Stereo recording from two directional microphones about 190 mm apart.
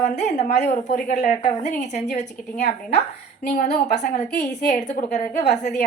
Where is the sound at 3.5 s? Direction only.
40° left (ahead or behind).